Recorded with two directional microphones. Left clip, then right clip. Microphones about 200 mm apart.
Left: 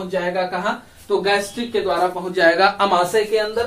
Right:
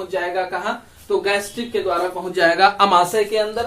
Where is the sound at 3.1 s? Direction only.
35° right (ahead or behind).